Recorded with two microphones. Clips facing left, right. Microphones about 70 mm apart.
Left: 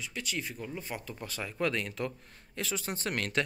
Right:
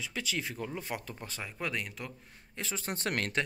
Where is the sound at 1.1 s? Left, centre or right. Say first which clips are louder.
Left 3 dB; right; by 2.1 s centre.